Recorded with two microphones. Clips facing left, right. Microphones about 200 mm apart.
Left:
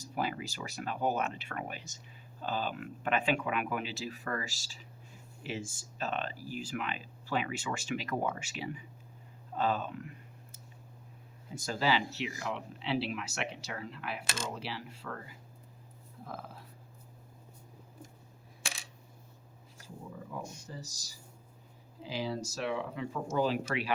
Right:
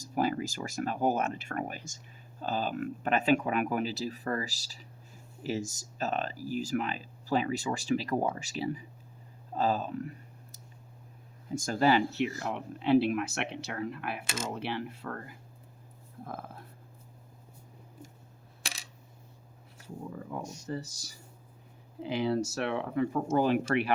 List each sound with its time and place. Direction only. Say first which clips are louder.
0.0 s speech: right 6 dB; 45° right (ahead or behind)
11.5 s speech: right 6 dB; 50° right (ahead or behind)
20.3 s speech: right 7 dB; 60° right (ahead or behind)